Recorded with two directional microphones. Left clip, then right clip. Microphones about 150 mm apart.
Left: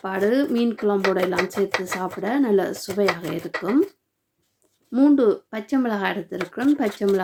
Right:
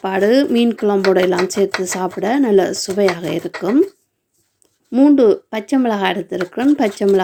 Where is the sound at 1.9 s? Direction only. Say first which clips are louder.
Right 6 dB; 30° right (ahead or behind).